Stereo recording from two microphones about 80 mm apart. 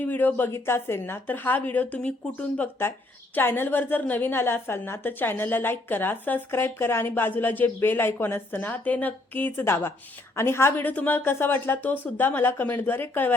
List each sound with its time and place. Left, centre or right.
0.0 s a woman's voice: left